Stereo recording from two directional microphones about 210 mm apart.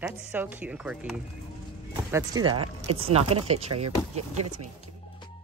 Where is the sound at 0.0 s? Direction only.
10° right (ahead or behind).